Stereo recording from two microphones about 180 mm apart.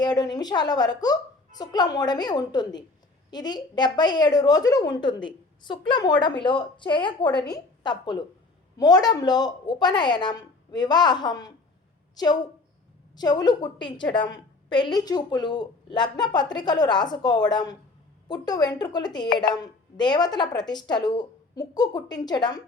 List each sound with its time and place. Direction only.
0.0 s a woman's voice: 20° left (ahead or behind)